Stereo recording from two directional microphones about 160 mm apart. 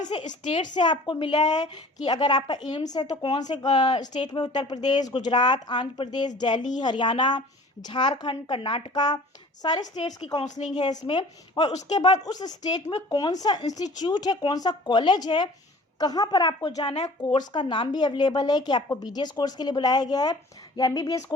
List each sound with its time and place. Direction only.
0.1 s a woman's voice: 35° left (ahead or behind)
9.8 s speech: 45° left (ahead or behind)
10.2 s a woman's voice: 25° left (ahead or behind)
16.9 s speech: 45° left (ahead or behind)
17.5 s a woman's voice: 30° left (ahead or behind)